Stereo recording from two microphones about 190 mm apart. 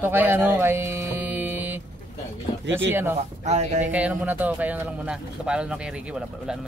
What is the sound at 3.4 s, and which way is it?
Speech, 35° right (ahead or behind).